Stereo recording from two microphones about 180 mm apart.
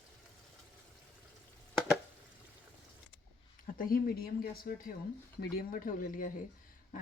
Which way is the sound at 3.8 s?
55° left (ahead or behind).